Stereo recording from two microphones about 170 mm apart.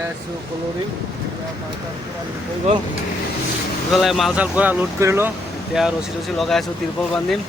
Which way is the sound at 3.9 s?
Centre (ahead or behind).